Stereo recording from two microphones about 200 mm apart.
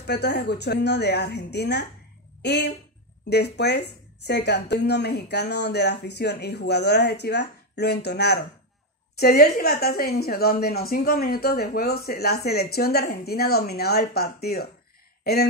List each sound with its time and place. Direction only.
0.0 s a woman's voice: 55° left (ahead or behind)